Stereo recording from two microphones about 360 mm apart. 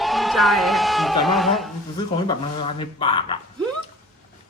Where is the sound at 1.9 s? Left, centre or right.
Centre.